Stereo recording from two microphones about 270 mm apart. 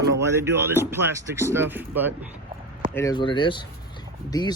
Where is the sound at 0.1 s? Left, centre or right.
Centre.